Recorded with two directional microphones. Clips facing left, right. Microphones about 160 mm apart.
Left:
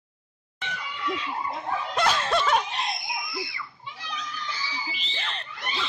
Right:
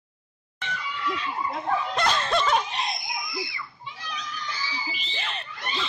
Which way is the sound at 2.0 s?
5° left (ahead or behind).